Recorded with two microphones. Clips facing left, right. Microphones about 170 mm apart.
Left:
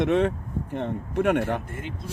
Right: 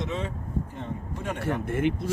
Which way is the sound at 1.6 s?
70° right (ahead or behind).